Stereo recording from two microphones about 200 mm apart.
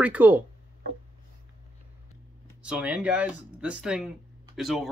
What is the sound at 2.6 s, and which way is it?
Speech, 5° right (ahead or behind).